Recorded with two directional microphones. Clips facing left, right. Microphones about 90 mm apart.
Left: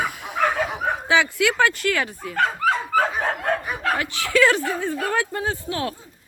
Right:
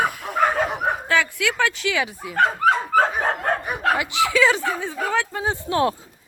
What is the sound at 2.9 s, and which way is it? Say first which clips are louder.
Dog: right 2 dB; 30° right (ahead or behind).